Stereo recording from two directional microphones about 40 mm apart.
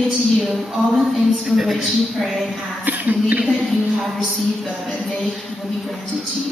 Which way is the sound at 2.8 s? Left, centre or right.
Right.